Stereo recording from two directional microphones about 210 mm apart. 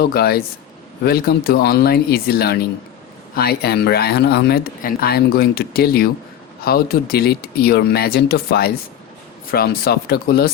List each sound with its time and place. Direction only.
0.0 s speech: 50° left (ahead or behind)